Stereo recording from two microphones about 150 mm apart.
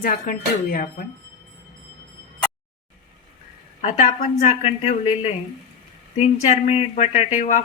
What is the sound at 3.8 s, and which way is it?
Speech, 45° left (ahead or behind).